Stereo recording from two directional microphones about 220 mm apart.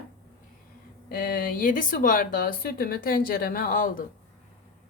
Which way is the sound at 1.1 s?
40° left (ahead or behind).